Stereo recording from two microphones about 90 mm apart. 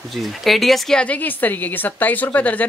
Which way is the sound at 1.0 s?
15° left (ahead or behind).